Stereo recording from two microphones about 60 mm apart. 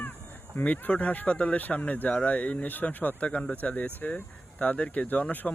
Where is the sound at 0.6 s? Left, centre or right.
Left.